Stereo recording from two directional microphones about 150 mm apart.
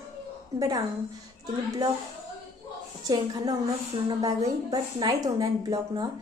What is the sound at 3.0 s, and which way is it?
A woman's voice, 25° right (ahead or behind).